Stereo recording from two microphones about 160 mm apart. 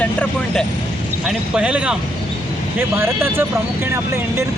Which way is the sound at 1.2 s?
5° right (ahead or behind).